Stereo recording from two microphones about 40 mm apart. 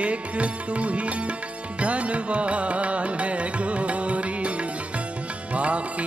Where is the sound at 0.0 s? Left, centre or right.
Right.